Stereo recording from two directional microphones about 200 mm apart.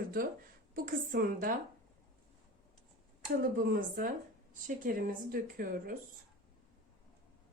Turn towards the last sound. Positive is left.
turn(degrees=-45)  # may be behind; listen again after turning